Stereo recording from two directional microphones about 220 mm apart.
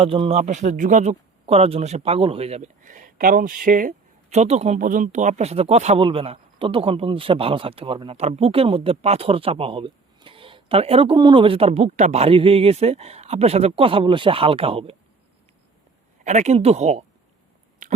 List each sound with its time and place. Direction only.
0.0 s speech: 25° right (ahead or behind)
16.2 s speech: 30° right (ahead or behind)